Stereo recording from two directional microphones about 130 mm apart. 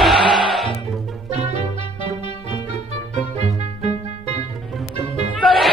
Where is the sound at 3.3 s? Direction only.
55° right (ahead or behind).